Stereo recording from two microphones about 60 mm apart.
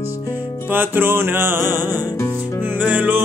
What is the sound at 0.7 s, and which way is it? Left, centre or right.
Music, right.